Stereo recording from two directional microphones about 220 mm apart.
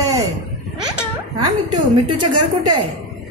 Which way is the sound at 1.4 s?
90° right.